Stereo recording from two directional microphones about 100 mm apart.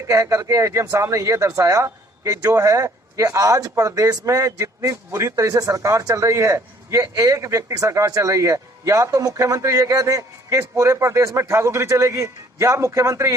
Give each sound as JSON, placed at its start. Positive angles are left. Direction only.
{"t": 0.1, "sound": "speech", "side_deg": -35}